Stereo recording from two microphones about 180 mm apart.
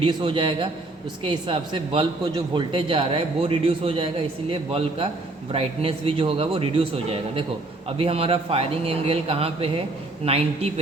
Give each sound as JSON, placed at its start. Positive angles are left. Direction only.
{"t": 0.0, "sound": "a man's voice", "side_deg": -25}